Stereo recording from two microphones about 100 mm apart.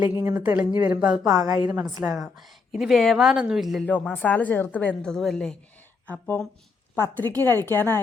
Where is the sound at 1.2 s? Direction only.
35° right (ahead or behind).